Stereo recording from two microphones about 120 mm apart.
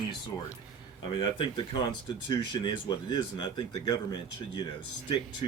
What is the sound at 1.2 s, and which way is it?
Speech, 45° left (ahead or behind).